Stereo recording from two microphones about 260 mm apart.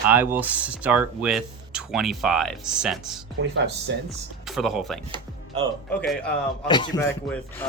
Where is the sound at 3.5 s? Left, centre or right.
Right.